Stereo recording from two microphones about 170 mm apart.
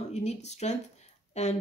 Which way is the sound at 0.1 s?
40° left (ahead or behind).